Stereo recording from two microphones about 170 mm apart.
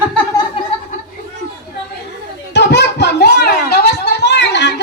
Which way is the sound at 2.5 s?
90° left.